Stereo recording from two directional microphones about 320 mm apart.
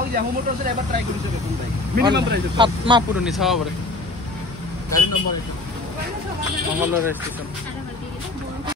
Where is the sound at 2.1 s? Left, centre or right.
Right.